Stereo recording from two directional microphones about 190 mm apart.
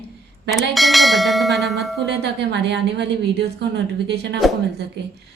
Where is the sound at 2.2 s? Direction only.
65° right (ahead or behind).